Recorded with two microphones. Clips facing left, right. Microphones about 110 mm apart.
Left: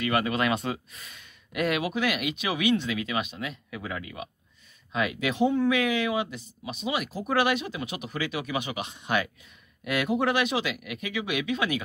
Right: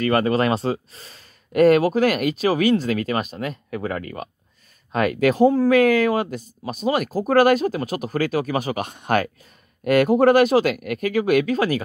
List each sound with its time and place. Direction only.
0.0 s speech: 40° right (ahead or behind)